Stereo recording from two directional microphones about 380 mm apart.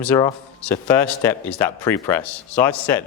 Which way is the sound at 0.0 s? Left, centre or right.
Centre.